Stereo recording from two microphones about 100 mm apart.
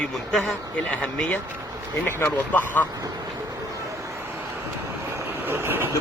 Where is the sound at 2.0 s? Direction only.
25° left (ahead or behind).